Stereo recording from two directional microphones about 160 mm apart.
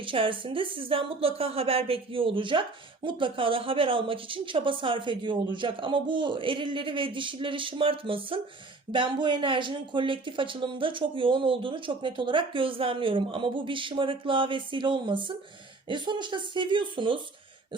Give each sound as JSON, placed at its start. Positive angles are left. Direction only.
{"t": 0.0, "sound": "a woman's voice", "side_deg": -30}